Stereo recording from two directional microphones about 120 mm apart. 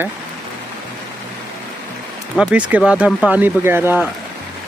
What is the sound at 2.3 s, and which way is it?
Speech, 10° right (ahead or behind).